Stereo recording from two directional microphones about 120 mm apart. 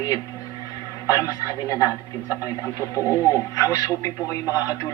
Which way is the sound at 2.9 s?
25° left (ahead or behind).